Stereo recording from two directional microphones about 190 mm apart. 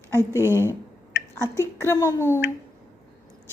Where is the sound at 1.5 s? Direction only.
15° left (ahead or behind).